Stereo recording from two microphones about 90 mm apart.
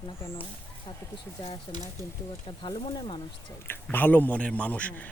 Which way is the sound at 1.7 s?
75° left (ahead or behind).